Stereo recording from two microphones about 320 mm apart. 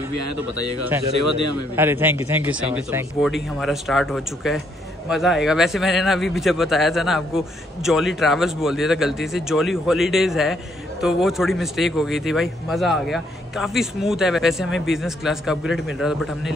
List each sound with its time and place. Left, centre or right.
1.8 s a man's voice: centre